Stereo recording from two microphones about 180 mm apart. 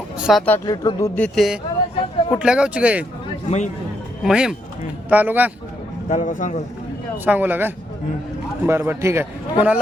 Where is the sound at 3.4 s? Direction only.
40° left (ahead or behind).